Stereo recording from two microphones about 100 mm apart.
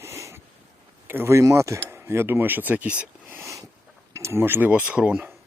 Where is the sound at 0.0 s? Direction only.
30° right (ahead or behind).